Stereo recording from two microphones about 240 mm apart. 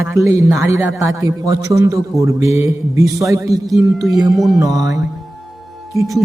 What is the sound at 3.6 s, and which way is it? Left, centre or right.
Speech, centre.